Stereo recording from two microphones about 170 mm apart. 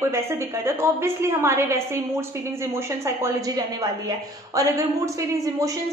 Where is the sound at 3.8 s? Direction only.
20° right (ahead or behind).